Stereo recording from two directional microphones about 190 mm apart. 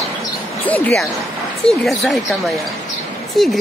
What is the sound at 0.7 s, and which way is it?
Speech, 10° left (ahead or behind).